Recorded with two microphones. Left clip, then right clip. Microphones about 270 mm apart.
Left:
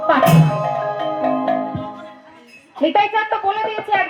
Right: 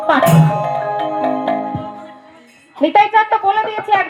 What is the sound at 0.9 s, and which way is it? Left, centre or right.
Music, right.